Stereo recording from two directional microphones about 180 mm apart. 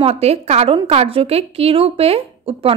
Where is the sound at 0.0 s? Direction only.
35° right (ahead or behind).